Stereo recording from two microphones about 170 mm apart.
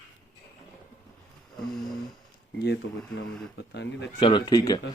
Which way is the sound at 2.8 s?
90° left.